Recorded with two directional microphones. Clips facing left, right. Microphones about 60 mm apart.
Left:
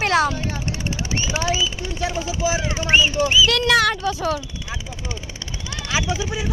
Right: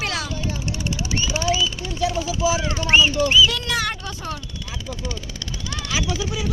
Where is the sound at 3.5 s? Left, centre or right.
Left.